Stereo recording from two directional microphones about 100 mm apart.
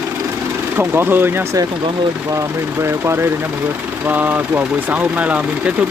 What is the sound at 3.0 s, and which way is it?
Speech, 25° right (ahead or behind).